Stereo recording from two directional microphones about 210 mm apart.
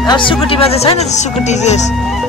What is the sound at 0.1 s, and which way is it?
Speech, 25° left (ahead or behind).